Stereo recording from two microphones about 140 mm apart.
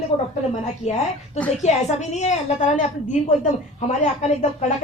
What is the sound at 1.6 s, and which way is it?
A woman's voice, 55° left (ahead or behind).